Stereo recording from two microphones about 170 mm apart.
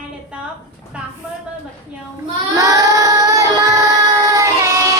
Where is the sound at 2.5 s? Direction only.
20° right (ahead or behind).